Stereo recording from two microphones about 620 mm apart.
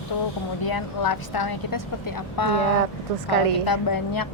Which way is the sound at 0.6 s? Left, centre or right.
Left.